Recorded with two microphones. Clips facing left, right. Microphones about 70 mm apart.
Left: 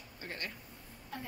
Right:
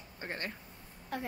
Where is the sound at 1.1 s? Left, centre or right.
Right.